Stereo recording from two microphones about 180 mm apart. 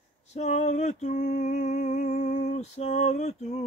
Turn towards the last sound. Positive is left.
turn(degrees=40)  # may be behind; listen again after turning